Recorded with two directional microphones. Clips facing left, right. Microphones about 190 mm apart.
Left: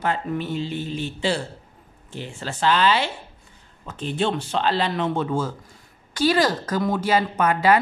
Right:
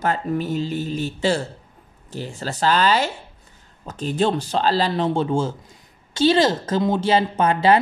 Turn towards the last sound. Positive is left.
turn(degrees=-30)  # may be behind; listen again after turning